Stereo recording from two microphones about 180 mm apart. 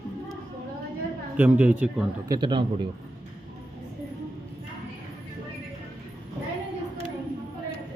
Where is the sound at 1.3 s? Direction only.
10° right (ahead or behind).